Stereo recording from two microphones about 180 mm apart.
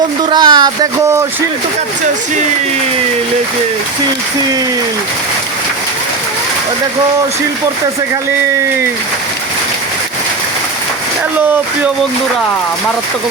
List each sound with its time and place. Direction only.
0.3 s speech: 25° right (ahead or behind)